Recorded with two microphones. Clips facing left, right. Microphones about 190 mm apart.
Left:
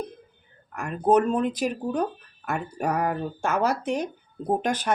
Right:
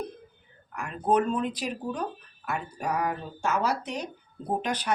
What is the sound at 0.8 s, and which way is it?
Speech, 45° left (ahead or behind).